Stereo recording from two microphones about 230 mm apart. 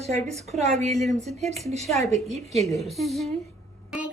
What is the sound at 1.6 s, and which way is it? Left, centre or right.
Speech, right.